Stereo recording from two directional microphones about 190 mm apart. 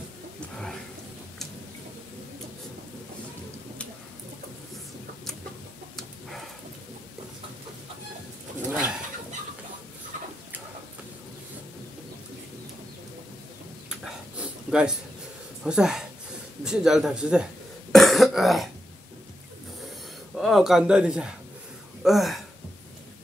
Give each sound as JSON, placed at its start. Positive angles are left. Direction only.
{"t": 14.4, "sound": "a sound", "side_deg": -5}
{"t": 15.6, "sound": "speech", "side_deg": -5}
{"t": 17.9, "sound": "cough", "side_deg": 0}
{"t": 20.3, "sound": "speech", "side_deg": 0}